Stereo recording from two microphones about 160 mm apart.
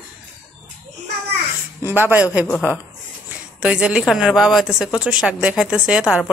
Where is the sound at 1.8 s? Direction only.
15° right (ahead or behind).